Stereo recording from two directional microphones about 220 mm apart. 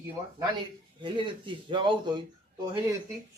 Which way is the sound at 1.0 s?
20° right (ahead or behind).